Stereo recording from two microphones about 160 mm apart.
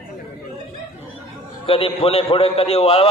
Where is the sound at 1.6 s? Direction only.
35° left (ahead or behind).